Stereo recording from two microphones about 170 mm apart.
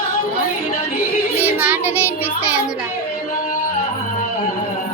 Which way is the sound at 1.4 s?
10° right (ahead or behind).